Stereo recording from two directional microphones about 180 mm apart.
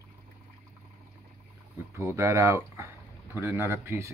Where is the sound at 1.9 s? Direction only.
15° right (ahead or behind).